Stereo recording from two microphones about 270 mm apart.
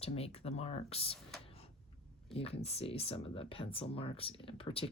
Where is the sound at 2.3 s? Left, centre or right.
Left.